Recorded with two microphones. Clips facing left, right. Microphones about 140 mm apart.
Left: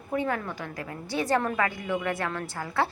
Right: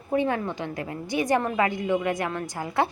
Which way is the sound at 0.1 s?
20° right (ahead or behind).